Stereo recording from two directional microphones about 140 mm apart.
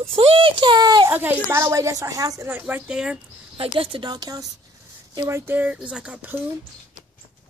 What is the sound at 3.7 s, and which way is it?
Speech, 40° right (ahead or behind).